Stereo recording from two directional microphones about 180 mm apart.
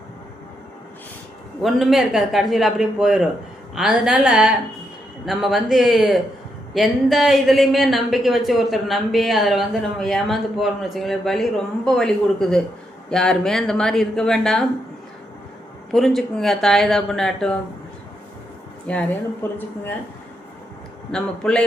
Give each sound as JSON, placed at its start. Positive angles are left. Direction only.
{"t": 1.6, "sound": "a woman's voice", "side_deg": 0}
{"t": 15.9, "sound": "a woman's voice", "side_deg": 0}
{"t": 18.9, "sound": "speech", "side_deg": 10}
{"t": 21.1, "sound": "a woman's voice", "side_deg": 5}